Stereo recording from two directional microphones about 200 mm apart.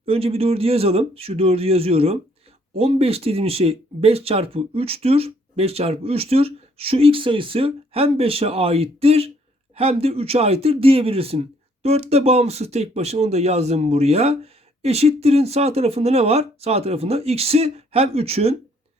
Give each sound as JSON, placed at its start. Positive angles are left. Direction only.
{"t": 0.0, "sound": "speech", "side_deg": -30}